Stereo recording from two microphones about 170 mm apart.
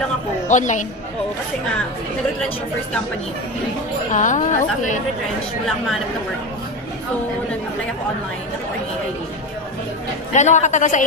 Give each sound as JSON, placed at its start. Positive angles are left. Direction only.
{"t": 0.5, "sound": "a woman's voice", "side_deg": 45}
{"t": 4.1, "sound": "a woman's voice", "side_deg": 45}
{"t": 10.3, "sound": "a woman's voice", "side_deg": 45}